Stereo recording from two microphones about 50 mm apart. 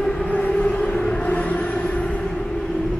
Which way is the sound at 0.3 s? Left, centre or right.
Left.